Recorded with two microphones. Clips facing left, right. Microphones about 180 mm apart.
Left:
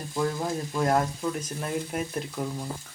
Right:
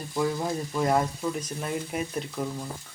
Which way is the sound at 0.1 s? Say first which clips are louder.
Right 1 dB; 5° right (ahead or behind).